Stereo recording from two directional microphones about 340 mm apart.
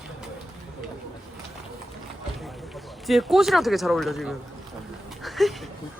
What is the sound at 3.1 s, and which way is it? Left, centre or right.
Speech, centre.